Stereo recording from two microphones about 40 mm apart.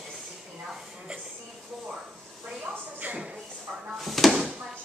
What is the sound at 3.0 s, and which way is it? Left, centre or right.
Shuffle, right.